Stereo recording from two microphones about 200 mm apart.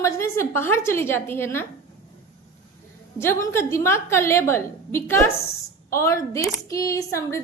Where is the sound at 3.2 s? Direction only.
15° left (ahead or behind).